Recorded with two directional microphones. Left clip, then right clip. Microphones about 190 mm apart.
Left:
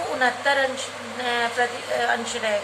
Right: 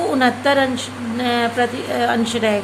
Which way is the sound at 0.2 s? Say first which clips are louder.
Right 3 dB; 35° right (ahead or behind).